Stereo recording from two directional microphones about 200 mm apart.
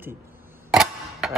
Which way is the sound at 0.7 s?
Centre (ahead or behind).